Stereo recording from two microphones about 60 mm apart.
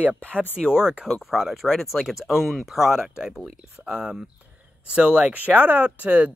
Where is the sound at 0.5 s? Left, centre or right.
Centre.